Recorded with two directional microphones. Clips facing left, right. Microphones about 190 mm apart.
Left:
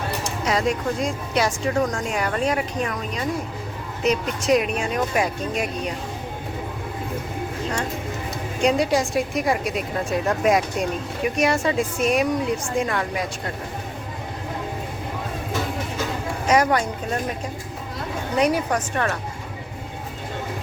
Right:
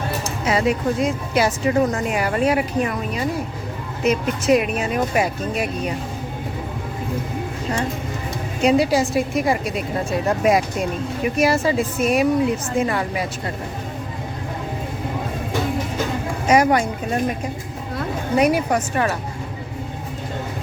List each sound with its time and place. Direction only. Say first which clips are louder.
0.4 s a woman's voice: right 3 dB; 5° right (ahead or behind)
8.6 s a woman's voice: right 3 dB; 5° right (ahead or behind)
16.5 s a woman's voice: right 3 dB; 10° right (ahead or behind)
18.3 s a woman's voice: right 3 dB; 10° right (ahead or behind)